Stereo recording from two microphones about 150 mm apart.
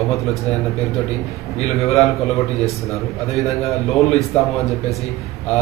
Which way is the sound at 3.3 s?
Centre (ahead or behind).